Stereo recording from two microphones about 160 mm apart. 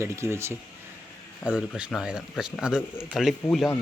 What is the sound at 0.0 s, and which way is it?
Speech, 15° right (ahead or behind).